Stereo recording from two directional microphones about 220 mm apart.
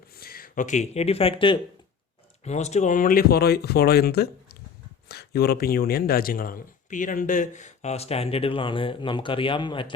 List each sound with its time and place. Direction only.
0.2 s speech: 40° left (ahead or behind); by 9.9 s 20° left (ahead or behind)